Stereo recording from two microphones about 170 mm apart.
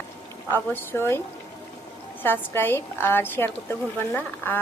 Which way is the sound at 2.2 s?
10° left (ahead or behind).